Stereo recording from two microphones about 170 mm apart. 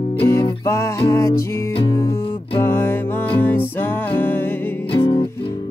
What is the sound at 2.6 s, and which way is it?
Music, 15° left (ahead or behind).